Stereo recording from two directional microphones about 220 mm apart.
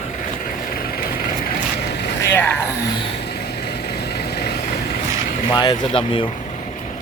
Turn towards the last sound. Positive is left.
turn(degrees=25)  # may be behind; listen again after turning